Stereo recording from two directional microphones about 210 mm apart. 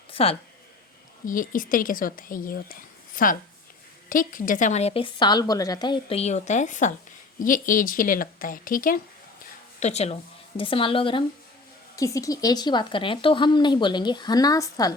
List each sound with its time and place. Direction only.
0.1 s a sound: 25° left (ahead or behind)
1.2 s a woman's voice: 40° left (ahead or behind)
9.8 s a woman's voice: 30° left (ahead or behind)